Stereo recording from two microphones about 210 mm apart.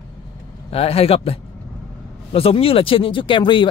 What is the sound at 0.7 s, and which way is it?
Speech, 30° left (ahead or behind).